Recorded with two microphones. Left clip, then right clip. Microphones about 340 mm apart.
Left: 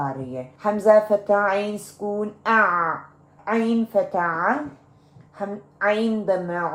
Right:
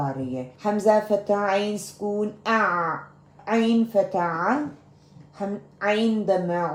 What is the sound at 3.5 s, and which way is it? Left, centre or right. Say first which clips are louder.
A woman's voice: even; centre.